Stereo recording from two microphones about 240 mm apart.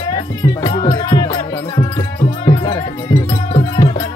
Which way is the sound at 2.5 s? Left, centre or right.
Centre.